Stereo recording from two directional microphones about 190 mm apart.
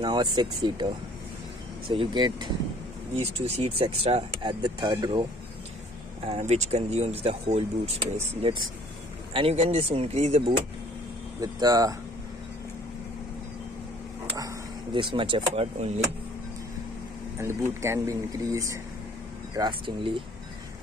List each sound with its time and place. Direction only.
0.0 s speech: 20° right (ahead or behind)
1.9 s speech: 25° right (ahead or behind)
3.2 s speech: 35° right (ahead or behind)
6.2 s speech: 35° right (ahead or behind)
11.4 s speech: 20° right (ahead or behind)
15.0 s speech: 25° right (ahead or behind)
17.4 s speech: 15° right (ahead or behind)